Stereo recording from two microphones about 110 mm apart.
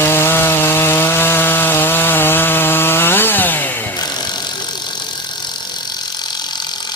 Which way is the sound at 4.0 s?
40° left (ahead or behind).